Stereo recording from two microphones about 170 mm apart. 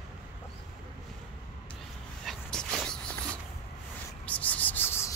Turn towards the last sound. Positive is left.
turn(degrees=15)  # may be behind; listen again after turning